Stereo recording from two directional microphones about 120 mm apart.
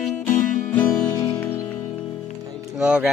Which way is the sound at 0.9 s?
30° left (ahead or behind).